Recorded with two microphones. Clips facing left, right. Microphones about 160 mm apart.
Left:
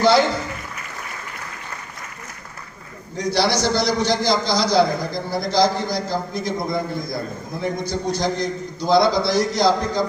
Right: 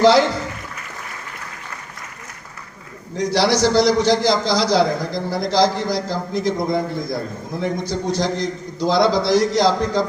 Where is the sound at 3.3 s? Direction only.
90° right.